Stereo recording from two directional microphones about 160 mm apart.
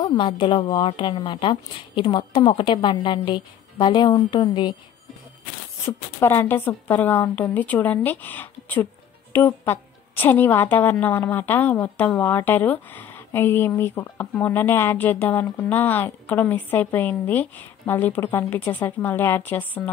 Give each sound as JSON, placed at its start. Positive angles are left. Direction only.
{"t": 0.0, "sound": "a woman's voice", "side_deg": 30}
{"t": 5.9, "sound": "a woman's voice", "side_deg": 15}